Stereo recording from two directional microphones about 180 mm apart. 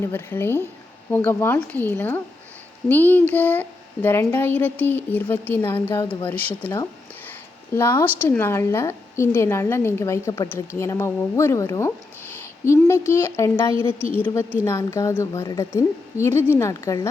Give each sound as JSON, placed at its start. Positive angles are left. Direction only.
{"t": 0.0, "sound": "speech", "side_deg": 15}